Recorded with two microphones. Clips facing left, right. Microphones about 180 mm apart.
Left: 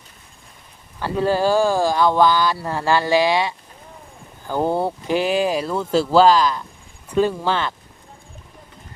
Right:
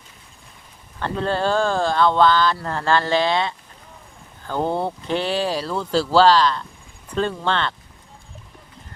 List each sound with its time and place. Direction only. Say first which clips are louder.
0.9 s speech: left 3 dB; 10° left (ahead or behind)